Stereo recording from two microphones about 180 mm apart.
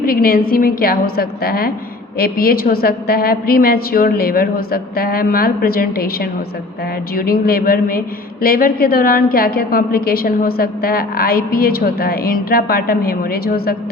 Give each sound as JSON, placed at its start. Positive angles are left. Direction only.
{"t": 0.0, "sound": "a woman's voice", "side_deg": 55}